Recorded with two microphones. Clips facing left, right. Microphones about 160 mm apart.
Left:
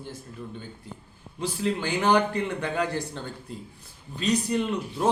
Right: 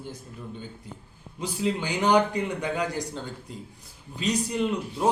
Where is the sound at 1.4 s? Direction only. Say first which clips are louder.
Even; 15° right (ahead or behind).